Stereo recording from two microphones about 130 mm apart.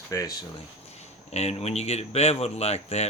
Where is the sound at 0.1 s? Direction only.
25° left (ahead or behind).